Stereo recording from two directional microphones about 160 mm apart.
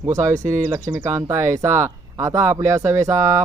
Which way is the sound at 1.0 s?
15° right (ahead or behind).